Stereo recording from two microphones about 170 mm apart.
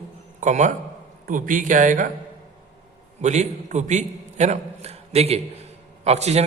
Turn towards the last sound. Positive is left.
turn(degrees=-40)  # may be behind; listen again after turning